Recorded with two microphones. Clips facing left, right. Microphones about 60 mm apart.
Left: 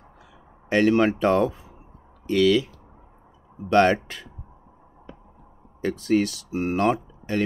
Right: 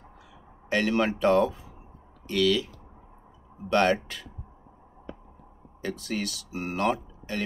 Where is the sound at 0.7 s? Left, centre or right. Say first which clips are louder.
Left 6 dB; left.